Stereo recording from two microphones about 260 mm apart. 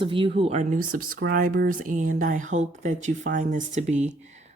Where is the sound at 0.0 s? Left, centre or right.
Centre.